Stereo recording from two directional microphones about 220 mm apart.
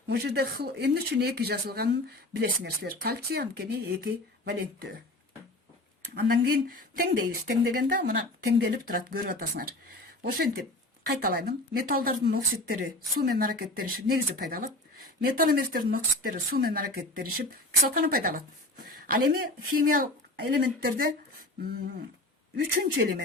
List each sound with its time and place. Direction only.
0.1 s speech: 45° right (ahead or behind)
6.4 s speech: 40° right (ahead or behind)
11.2 s a woman's voice: 40° right (ahead or behind)
22.5 s speech: 45° right (ahead or behind)